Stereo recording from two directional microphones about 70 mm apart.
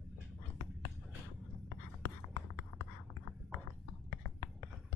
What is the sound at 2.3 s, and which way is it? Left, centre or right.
Writing, left.